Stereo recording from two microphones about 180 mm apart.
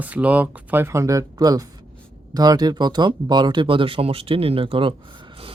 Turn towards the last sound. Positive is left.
turn(degrees=-30)  # may be behind; listen again after turning